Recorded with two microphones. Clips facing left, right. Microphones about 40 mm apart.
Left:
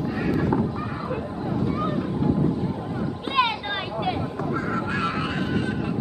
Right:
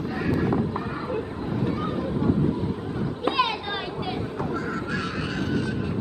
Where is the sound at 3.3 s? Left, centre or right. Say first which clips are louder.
Left 5 dB; left.